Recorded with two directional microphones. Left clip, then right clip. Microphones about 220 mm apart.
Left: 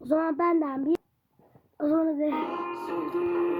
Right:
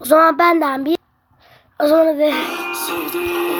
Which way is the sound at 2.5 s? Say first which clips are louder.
Right 9 dB; 30° right (ahead or behind).